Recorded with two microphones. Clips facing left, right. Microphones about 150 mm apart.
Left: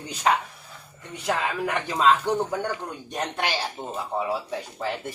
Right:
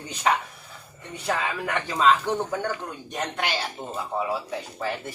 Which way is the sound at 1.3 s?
15° left (ahead or behind).